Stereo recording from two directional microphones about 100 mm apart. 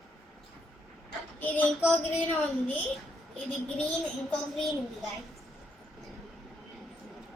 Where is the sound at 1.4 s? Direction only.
15° left (ahead or behind).